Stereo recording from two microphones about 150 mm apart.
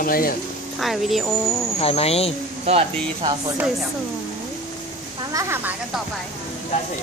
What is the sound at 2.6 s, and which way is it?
Speech, 40° right (ahead or behind).